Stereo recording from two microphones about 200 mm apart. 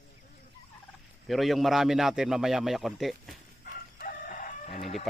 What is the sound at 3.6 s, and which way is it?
Crowing, 40° left (ahead or behind).